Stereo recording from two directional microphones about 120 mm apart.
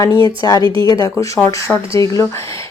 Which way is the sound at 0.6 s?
40° right (ahead or behind).